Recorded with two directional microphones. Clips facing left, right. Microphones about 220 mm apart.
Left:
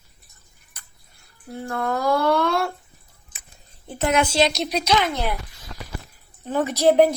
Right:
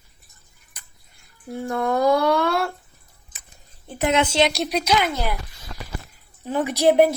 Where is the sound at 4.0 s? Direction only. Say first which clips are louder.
Even; 20° right (ahead or behind).